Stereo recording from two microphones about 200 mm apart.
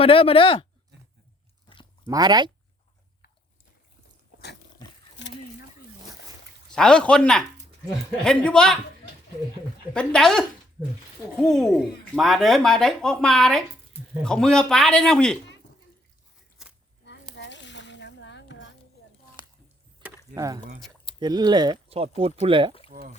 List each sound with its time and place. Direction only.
0.0 s speech: 30° left (ahead or behind)
1.6 s chewing: 25° left (ahead or behind)
2.0 s speech: 20° right (ahead or behind)
5.2 s a sound: 65° left (ahead or behind)
6.7 s speech: 5° left (ahead or behind)
9.9 s speech: 5° left (ahead or behind)
17.1 s a sound: 60° left (ahead or behind)
20.3 s speech: 15° right (ahead or behind)
22.9 s speech: 40° right (ahead or behind)